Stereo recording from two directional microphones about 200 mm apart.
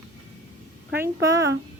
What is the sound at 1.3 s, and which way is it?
Speech, 15° right (ahead or behind).